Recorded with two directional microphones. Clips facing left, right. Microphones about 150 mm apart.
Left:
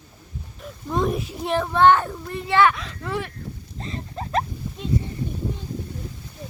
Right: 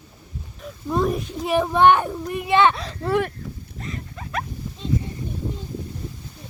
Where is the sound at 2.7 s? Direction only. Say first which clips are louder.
Right 6 dB; 35° right (ahead or behind).